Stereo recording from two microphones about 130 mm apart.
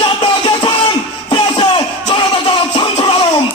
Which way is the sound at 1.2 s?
40° left (ahead or behind).